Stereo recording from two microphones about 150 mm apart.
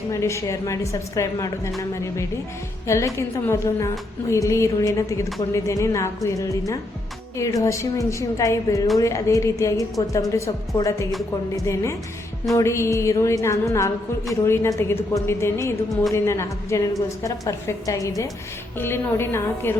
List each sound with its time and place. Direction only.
0.1 s a woman's voice: 20° left (ahead or behind)